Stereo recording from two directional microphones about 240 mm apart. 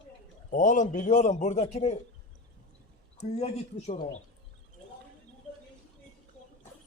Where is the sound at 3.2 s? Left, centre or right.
Left.